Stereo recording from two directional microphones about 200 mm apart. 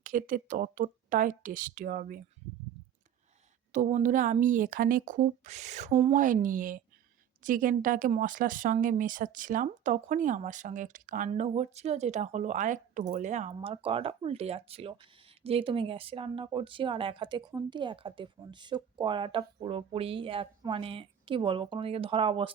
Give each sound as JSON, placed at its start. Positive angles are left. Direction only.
{"t": 0.0, "sound": "speech", "side_deg": -40}
{"t": 3.7, "sound": "speech", "side_deg": -35}